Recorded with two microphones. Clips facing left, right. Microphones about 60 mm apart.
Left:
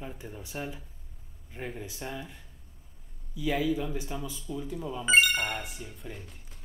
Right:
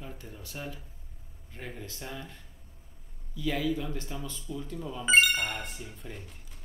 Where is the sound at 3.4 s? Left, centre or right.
Centre.